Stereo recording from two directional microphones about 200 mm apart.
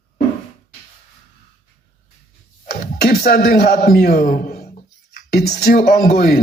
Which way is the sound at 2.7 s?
50° left (ahead or behind).